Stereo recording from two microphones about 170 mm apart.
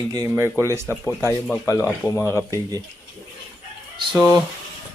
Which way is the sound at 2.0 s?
15° left (ahead or behind).